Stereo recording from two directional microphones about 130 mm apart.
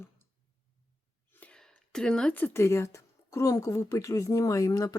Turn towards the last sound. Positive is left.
turn(degrees=30)  # may be behind; listen again after turning